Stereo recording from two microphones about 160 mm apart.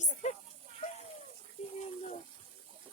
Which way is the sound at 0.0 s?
45° left (ahead or behind).